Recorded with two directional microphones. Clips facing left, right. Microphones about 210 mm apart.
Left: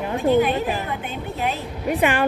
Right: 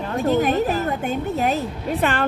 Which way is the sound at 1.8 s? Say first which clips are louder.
Left 4 dB; 15° left (ahead or behind).